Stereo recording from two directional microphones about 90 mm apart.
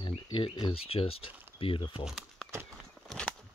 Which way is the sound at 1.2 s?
20° right (ahead or behind).